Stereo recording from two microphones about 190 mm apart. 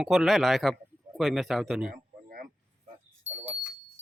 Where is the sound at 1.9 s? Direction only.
50° right (ahead or behind).